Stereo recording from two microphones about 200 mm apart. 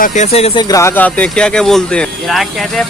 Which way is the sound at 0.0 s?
35° left (ahead or behind).